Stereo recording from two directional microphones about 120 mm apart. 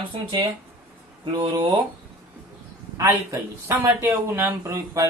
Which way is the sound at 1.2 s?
35° right (ahead or behind).